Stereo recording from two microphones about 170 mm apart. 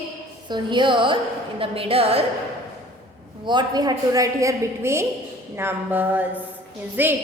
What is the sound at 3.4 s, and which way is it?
A woman's voice, 25° right (ahead or behind).